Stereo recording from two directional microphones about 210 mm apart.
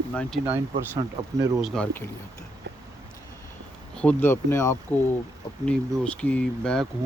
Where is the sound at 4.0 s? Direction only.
10° left (ahead or behind).